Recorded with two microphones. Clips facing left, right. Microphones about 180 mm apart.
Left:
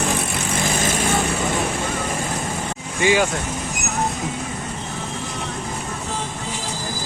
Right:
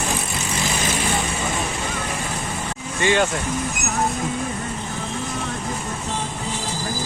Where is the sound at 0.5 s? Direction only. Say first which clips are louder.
Left 2 dB; 50° left (ahead or behind).